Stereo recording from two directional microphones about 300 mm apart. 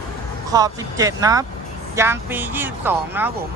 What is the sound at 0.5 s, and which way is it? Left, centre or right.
Speech, centre.